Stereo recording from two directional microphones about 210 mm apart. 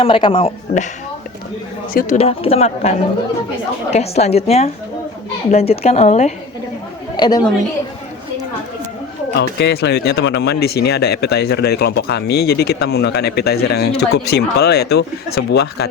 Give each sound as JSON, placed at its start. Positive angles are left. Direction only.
{"t": 0.0, "sound": "speech", "side_deg": 25}
{"t": 1.9, "sound": "speech", "side_deg": 45}
{"t": 2.1, "sound": "speech", "side_deg": 30}
{"t": 3.9, "sound": "a woman's voice", "side_deg": 30}
{"t": 7.2, "sound": "speech", "side_deg": 20}
{"t": 9.4, "sound": "speech", "side_deg": 55}